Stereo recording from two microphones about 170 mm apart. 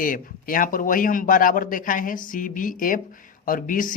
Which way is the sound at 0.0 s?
55° left (ahead or behind).